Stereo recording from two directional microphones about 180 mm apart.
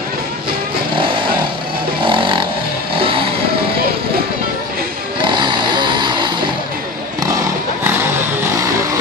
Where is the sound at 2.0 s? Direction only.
25° right (ahead or behind).